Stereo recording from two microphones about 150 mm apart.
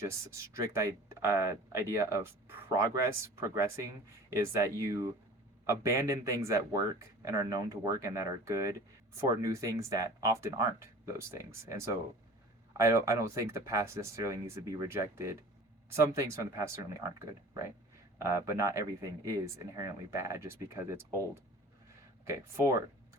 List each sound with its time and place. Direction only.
0.0 s speech: 20° right (ahead or behind)
4.3 s speech: 20° right (ahead or behind)
22.3 s speech: 20° right (ahead or behind)